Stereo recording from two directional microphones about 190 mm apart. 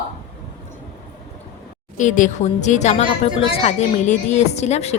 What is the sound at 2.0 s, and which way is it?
A woman's voice, 40° left (ahead or behind).